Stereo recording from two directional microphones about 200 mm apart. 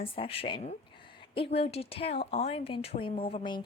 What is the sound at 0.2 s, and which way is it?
A woman's voice, 25° left (ahead or behind).